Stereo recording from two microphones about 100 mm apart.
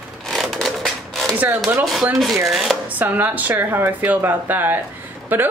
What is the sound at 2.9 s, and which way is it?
Speech, 15° right (ahead or behind).